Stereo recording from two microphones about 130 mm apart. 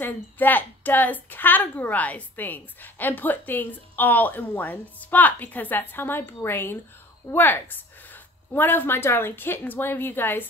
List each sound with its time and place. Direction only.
0.0 s a woman's voice: 15° left (ahead or behind)